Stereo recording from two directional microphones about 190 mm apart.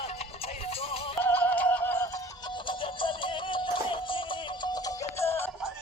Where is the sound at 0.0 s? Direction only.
30° left (ahead or behind).